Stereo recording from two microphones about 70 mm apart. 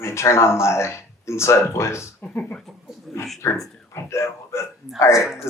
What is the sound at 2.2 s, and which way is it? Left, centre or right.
Speech, left.